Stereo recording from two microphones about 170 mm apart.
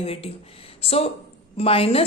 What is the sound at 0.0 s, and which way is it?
A woman's voice, 35° left (ahead or behind).